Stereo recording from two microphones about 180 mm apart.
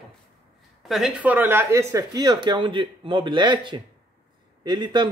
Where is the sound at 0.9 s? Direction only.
5° right (ahead or behind).